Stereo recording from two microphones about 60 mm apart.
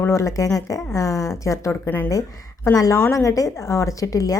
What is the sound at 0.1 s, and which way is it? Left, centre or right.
Speech, left.